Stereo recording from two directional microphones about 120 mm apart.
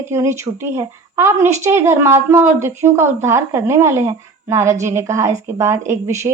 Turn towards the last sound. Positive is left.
turn(degrees=-20)  # may be behind; listen again after turning